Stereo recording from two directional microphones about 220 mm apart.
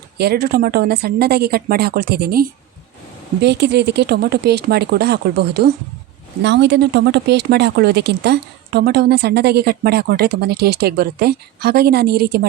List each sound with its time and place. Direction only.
0.2 s speech: 45° right (ahead or behind)